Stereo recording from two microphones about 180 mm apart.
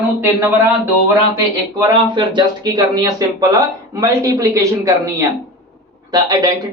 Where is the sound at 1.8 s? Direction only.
25° right (ahead or behind).